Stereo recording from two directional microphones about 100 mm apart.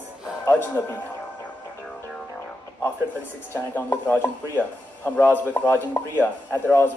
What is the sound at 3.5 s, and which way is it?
Speech, 20° left (ahead or behind).